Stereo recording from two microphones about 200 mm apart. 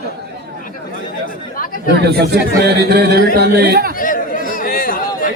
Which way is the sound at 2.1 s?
55° right (ahead or behind).